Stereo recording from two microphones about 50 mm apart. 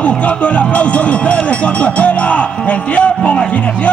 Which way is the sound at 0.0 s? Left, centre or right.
Left.